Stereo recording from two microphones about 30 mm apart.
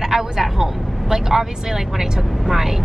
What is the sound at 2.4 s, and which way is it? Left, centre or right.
Speech, centre.